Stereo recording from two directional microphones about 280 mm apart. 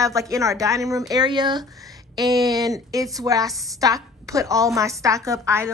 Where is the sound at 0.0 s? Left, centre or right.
Centre.